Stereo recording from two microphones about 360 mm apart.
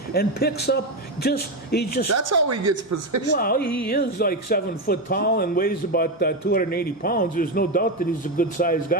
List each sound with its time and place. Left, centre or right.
0.1 s speech: left
2.0 s a woman's voice: right
3.3 s speech: left